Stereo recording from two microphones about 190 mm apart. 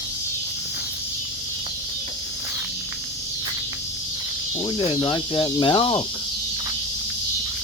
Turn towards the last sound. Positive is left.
turn(degrees=25)  # may be behind; listen again after turning